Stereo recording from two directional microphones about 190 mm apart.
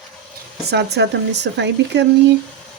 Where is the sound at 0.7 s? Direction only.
60° right (ahead or behind).